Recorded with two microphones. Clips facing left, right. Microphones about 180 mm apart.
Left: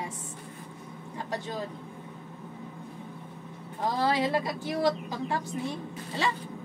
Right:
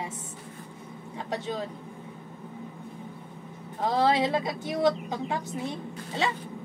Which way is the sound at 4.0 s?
20° right (ahead or behind).